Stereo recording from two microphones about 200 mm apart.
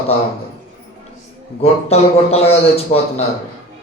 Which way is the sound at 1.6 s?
30° left (ahead or behind).